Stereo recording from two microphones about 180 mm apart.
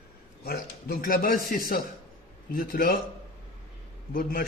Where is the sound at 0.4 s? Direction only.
60° left (ahead or behind).